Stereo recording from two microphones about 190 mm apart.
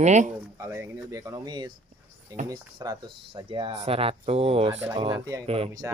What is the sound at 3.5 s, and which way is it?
Speech, 30° right (ahead or behind).